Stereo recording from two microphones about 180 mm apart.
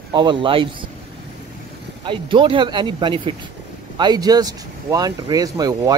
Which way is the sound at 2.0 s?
25° right (ahead or behind).